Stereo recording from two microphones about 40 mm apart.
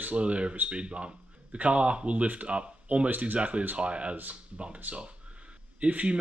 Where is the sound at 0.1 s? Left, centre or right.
Right.